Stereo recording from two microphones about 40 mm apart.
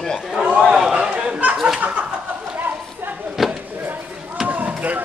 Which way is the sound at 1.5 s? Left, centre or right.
Centre.